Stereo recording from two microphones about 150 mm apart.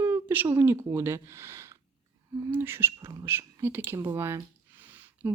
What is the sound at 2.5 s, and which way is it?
Speech, 15° right (ahead or behind).